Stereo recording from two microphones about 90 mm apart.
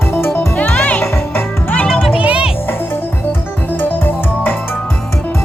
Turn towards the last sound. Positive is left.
turn(degrees=20)  # may be behind; listen again after turning